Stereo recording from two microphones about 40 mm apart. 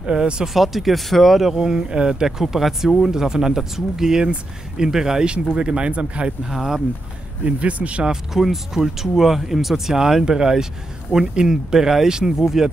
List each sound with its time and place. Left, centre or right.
0.0 s speech: right
0.5 s speech: centre
5.6 s speech: right
6.5 s speech: centre
7.4 s speech: right
8.0 s speech: centre